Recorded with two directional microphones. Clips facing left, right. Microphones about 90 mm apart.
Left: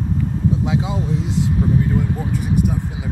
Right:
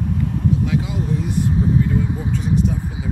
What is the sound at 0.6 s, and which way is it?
Speech, 20° left (ahead or behind).